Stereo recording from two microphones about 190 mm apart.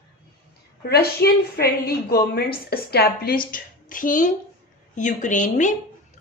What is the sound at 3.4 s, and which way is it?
A woman's voice, 45° left (ahead or behind).